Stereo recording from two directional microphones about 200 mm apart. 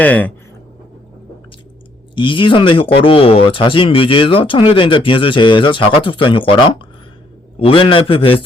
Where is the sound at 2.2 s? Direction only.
25° left (ahead or behind).